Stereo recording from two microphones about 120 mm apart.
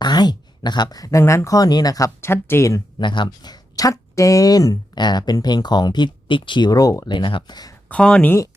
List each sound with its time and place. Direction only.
0.0 s speech: 35° left (ahead or behind)
3.0 s speech: 40° left (ahead or behind)
7.9 s speech: 10° left (ahead or behind)